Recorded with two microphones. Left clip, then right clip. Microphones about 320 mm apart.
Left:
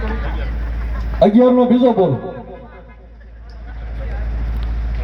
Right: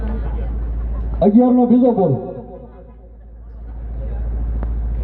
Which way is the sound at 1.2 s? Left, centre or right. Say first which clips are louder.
Left 3 dB; left.